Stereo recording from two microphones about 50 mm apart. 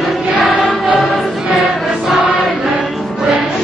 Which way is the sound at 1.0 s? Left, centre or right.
Centre.